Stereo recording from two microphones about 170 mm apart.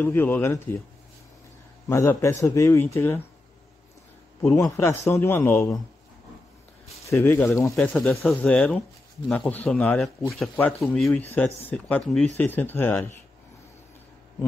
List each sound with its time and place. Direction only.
0.0 s speech: 10° left (ahead or behind)
1.9 s speech: 15° left (ahead or behind)
4.4 s a man's voice: 10° left (ahead or behind)
7.1 s a man's voice: 15° left (ahead or behind)